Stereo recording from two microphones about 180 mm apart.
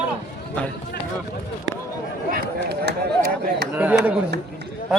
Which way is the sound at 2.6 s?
65° right (ahead or behind).